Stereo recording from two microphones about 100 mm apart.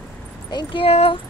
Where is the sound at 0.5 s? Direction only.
60° left (ahead or behind); by 1.2 s 80° left.